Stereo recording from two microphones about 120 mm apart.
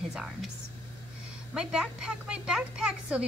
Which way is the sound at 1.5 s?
5° right (ahead or behind).